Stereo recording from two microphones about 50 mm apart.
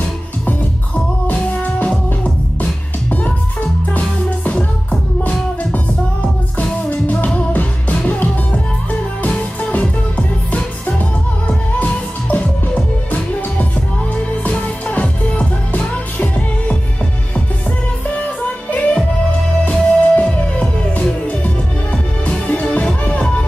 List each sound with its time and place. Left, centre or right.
1.2 s music: left
5.3 s music: left
6.9 s music: left
18.4 s music: left
22.5 s music: left